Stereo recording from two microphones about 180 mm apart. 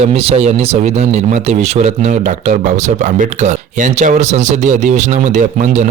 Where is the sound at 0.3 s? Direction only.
35° right (ahead or behind).